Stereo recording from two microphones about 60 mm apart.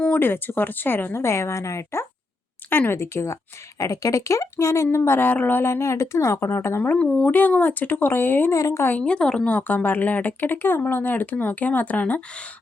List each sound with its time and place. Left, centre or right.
0.0 s speech: left
2.6 s speech: left
3.0 s speech: left
3.8 s speech: left
5.6 s speech: left
7.0 s speech: left
8.5 s a woman's voice: left
8.9 s a woman's voice: left
9.5 s speech: left